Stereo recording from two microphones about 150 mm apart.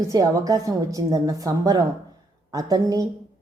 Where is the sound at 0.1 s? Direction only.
25° right (ahead or behind).